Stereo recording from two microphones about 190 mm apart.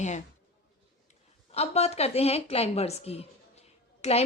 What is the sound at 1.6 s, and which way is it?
A woman's voice, 35° left (ahead or behind).